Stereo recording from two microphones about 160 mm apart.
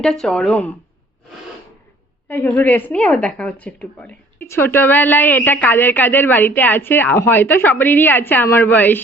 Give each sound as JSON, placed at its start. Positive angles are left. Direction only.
{"t": 0.0, "sound": "speech", "side_deg": 5}
{"t": 2.5, "sound": "speech", "side_deg": 10}